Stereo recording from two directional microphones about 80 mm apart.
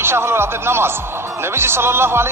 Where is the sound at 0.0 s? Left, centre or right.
Right.